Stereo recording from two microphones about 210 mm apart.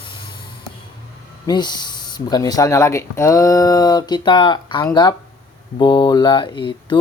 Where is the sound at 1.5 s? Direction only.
20° left (ahead or behind).